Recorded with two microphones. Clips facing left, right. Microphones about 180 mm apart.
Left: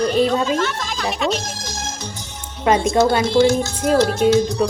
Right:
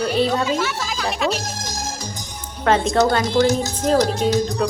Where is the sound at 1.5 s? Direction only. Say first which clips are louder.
Right 1 dB; 40° right (ahead or behind).